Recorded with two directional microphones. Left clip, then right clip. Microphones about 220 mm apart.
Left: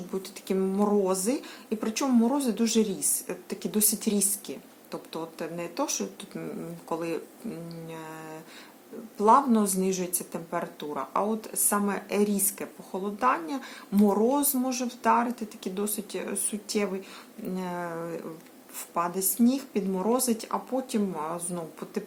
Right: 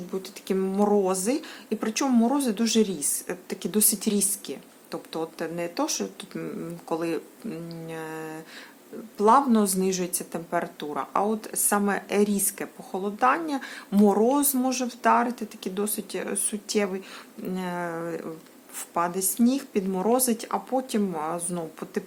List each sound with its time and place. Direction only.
0.1 s speech: 20° right (ahead or behind)